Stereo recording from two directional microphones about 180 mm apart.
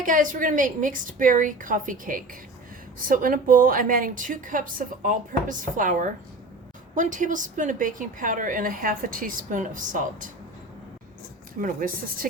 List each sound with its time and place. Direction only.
0.0 s a woman's voice: 50° right (ahead or behind)
11.6 s a woman's voice: 50° right (ahead or behind)